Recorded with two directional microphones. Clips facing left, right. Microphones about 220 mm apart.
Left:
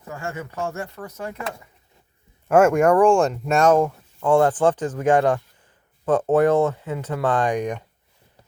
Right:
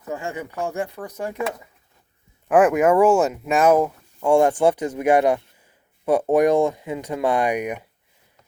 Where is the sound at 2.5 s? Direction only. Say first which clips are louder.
Even; centre (ahead or behind).